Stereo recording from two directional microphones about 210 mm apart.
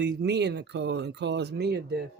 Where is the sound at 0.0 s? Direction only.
55° right (ahead or behind).